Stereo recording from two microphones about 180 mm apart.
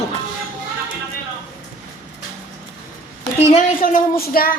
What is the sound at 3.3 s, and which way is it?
A woman's voice, 45° left (ahead or behind).